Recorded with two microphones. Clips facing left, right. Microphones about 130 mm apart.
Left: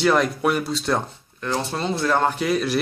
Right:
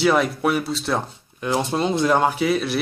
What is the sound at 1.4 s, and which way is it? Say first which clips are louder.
Speech: right 4 dB; 15° right (ahead or behind).